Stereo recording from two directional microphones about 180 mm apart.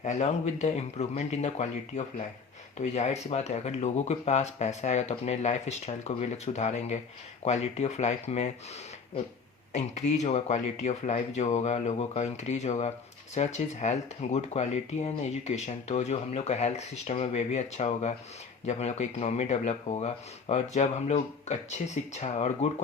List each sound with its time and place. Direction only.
0.0 s speech: 40° left (ahead or behind)